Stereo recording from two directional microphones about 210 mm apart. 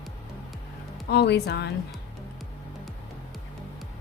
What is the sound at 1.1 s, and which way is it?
Speech, 55° left (ahead or behind).